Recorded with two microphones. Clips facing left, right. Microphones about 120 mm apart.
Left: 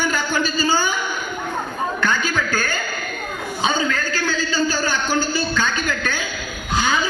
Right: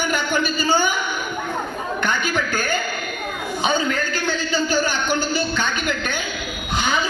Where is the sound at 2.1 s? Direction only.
60° right (ahead or behind).